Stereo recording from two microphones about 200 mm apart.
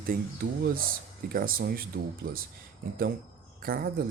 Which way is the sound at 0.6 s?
45° right (ahead or behind).